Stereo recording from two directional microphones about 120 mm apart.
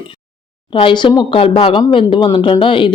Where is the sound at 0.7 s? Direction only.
45° left (ahead or behind).